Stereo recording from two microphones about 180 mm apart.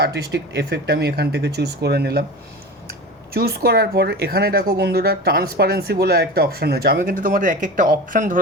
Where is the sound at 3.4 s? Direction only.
60° right (ahead or behind).